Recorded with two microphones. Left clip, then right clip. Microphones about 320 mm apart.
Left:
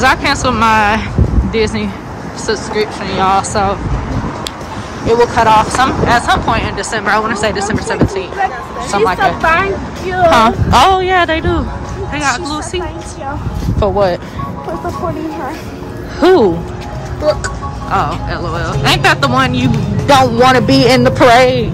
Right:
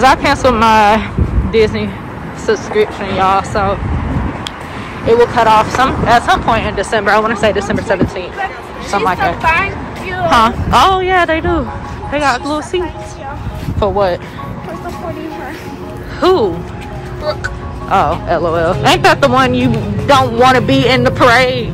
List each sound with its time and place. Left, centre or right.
0.0 s speech: centre
3.2 s speech: centre
5.0 s speech: centre
9.4 s speech: left
10.3 s speech: centre
16.2 s speech: centre
17.8 s speech: centre